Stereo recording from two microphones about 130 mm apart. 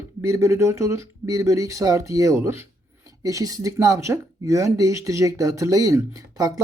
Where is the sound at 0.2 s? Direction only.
20° right (ahead or behind).